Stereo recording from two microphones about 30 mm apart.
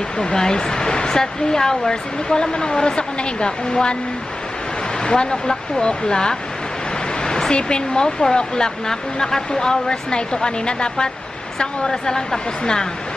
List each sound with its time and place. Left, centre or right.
0.2 s speech: left
5.0 s speech: left
7.2 s a sound: left
7.5 s speech: left